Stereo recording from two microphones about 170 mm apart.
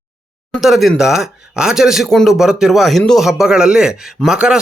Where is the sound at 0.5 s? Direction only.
Centre (ahead or behind).